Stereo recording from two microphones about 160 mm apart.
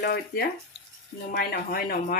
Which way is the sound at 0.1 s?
70° left (ahead or behind).